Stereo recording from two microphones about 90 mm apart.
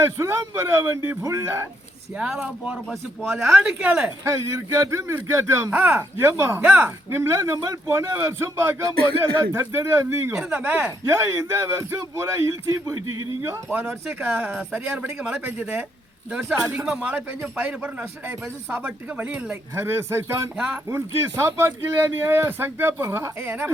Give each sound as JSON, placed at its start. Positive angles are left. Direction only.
{"t": 0.0, "sound": "a man's voice", "side_deg": -25}
{"t": 2.1, "sound": "speech", "side_deg": -10}
{"t": 3.6, "sound": "speech", "side_deg": -15}
{"t": 4.2, "sound": "a man's voice", "side_deg": -35}
{"t": 5.7, "sound": "speech", "side_deg": -20}
{"t": 10.5, "sound": "speech", "side_deg": -20}
{"t": 11.1, "sound": "a man's voice", "side_deg": -30}
{"t": 14.7, "sound": "speech", "side_deg": -15}
{"t": 19.7, "sound": "speech", "side_deg": -25}